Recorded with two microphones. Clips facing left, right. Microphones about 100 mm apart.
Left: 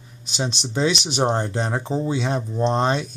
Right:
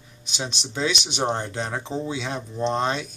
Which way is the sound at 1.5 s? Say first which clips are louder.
Left 4 dB; 30° left (ahead or behind).